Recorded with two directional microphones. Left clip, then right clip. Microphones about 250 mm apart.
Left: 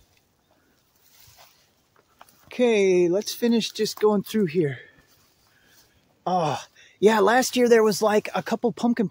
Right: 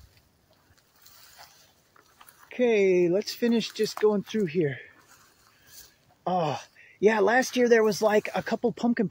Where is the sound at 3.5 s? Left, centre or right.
Left.